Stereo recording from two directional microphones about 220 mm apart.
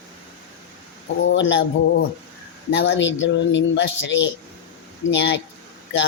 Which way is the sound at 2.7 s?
55° left (ahead or behind).